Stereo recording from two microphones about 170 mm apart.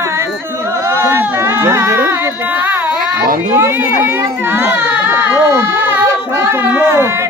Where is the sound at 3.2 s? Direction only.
55° right (ahead or behind).